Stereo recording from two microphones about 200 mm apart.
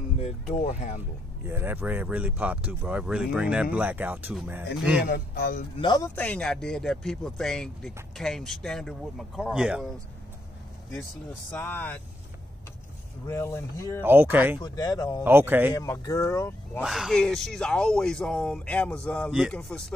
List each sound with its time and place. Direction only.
0.2 s speech: 35° left (ahead or behind)
1.5 s speech: 10° right (ahead or behind)
5.0 s speech: 55° left (ahead or behind)
5.8 s a man's voice: 20° left (ahead or behind); by 9.8 s 5° right (ahead or behind)
11.5 s speech: 10° left (ahead or behind)
13.3 s speech: 15° left (ahead or behind)
14.0 s speech: 10° right (ahead or behind)
14.6 s speech: 20° left (ahead or behind)
15.2 s speech: 10° right (ahead or behind)
15.7 s speech: 15° left (ahead or behind)
16.8 s a man's voice: centre (ahead or behind)